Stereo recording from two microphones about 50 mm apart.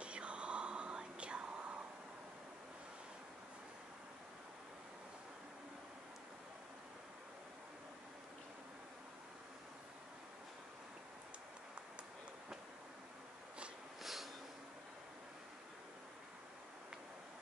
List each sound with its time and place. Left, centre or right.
0.0 s whispering: right
14.0 s snort: centre